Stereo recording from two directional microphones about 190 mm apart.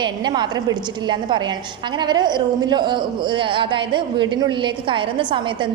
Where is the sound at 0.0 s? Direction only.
25° right (ahead or behind).